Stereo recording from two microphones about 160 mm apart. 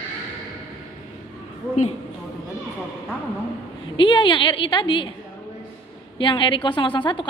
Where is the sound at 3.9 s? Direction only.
30° left (ahead or behind).